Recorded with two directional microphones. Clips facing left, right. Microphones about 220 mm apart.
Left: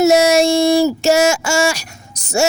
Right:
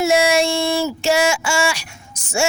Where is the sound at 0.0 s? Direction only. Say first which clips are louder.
Left 5 dB; 40° left (ahead or behind).